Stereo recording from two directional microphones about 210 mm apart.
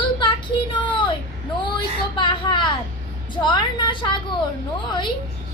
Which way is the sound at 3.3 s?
20° left (ahead or behind).